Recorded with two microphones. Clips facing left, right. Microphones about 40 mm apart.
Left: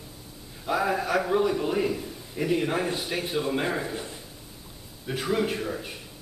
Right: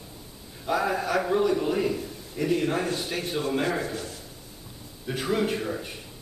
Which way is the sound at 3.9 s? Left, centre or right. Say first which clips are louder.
Even; left.